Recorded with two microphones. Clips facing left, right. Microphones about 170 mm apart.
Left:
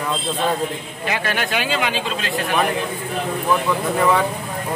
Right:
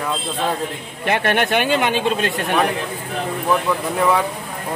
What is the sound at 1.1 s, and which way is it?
Speech, 55° right (ahead or behind).